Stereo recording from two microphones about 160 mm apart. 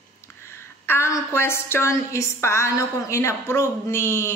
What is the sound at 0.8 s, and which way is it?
A woman's voice, 15° left (ahead or behind).